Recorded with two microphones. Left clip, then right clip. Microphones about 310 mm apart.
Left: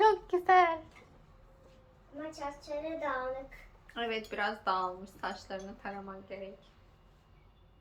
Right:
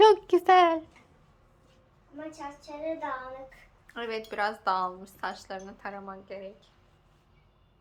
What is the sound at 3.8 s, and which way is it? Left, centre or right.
Speech, centre.